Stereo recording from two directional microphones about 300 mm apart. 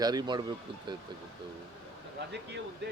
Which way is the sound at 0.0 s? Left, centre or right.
Centre.